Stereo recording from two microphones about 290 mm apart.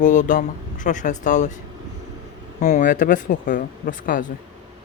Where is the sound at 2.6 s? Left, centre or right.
Left.